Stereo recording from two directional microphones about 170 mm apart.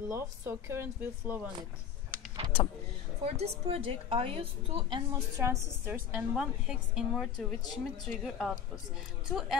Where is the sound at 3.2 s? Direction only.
35° right (ahead or behind).